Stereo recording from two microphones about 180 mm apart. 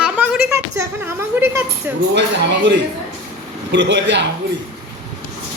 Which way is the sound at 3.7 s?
80° right.